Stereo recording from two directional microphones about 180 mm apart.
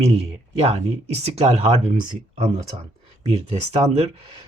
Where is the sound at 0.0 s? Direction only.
35° right (ahead or behind).